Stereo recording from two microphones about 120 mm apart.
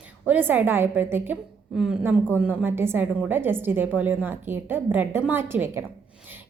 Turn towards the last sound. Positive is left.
turn(degrees=-20)  # may be behind; listen again after turning